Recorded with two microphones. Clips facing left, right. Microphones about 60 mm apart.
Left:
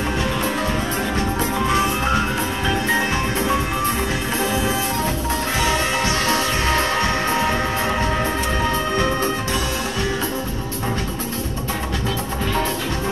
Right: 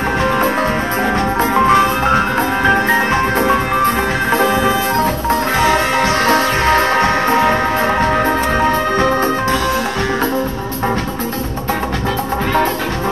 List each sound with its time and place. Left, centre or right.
1.4 s music: right